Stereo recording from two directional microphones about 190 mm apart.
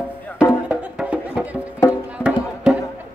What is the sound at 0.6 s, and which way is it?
Music, 5° right (ahead or behind).